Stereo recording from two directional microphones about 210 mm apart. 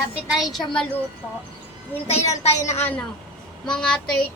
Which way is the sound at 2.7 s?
10° left (ahead or behind).